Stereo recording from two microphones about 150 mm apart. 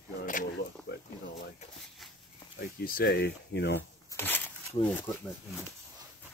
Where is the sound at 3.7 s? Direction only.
15° left (ahead or behind).